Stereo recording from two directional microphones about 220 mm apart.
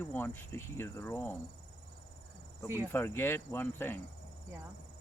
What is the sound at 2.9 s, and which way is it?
Speech, 10° left (ahead or behind).